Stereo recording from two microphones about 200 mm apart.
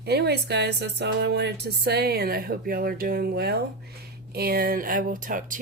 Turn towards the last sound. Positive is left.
turn(degrees=-40)  # may be behind; listen again after turning